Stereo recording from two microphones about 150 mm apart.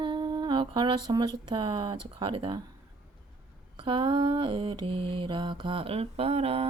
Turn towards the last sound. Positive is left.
turn(degrees=-40)  # may be behind; listen again after turning